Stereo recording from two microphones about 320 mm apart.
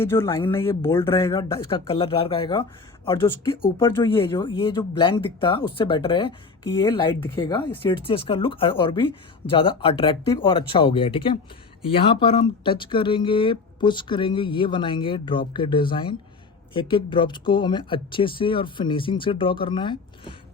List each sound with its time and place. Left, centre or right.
0.0 s speech: centre